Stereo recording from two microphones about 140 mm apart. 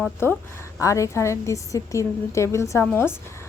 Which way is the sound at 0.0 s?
15° left (ahead or behind).